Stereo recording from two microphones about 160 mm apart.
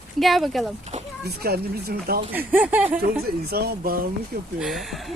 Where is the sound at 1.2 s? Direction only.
75° right (ahead or behind).